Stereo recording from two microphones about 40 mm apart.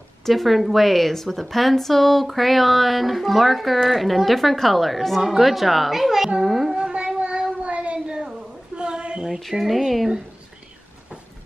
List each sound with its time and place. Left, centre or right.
0.2 s a woman's voice: centre
6.4 s music: centre
6.7 s a sound: right
9.4 s a woman's voice: centre